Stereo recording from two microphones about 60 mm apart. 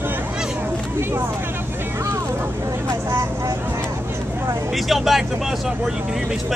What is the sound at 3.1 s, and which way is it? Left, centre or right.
Vehicle, right.